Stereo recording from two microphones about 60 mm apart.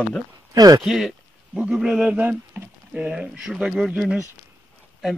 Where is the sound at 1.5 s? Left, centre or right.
Centre.